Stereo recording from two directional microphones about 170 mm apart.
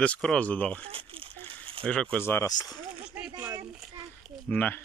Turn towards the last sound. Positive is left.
turn(degrees=10)  # may be behind; listen again after turning